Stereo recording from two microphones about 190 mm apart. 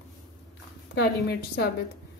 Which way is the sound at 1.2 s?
60° left (ahead or behind).